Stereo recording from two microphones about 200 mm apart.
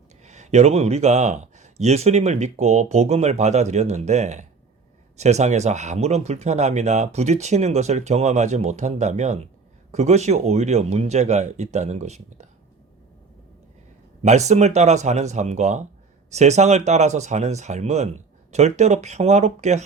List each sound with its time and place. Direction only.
0.2 s speech: 35° right (ahead or behind)
14.2 s speech: 35° right (ahead or behind)